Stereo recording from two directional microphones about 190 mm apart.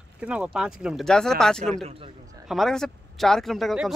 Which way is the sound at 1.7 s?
30° right (ahead or behind).